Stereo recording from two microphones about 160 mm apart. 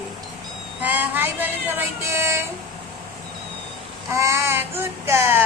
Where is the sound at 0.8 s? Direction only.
10° right (ahead or behind).